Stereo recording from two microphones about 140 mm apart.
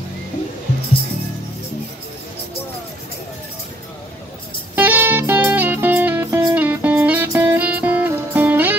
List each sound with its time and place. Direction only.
4.7 s music: 15° right (ahead or behind)